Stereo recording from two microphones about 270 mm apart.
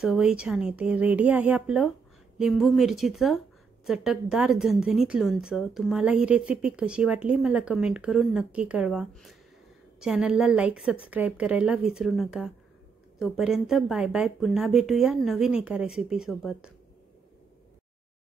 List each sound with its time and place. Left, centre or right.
0.0 s speech: centre